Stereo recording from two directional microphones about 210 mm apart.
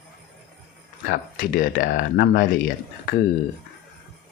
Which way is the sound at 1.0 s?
40° left (ahead or behind).